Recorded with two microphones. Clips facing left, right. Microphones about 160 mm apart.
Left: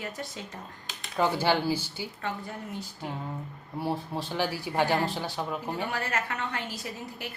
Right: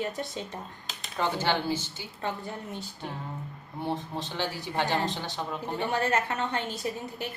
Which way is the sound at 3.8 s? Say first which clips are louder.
Left 1 dB; 10° left (ahead or behind).